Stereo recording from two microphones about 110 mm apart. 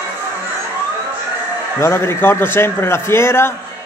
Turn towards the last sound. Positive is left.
turn(degrees=25)  # may be behind; listen again after turning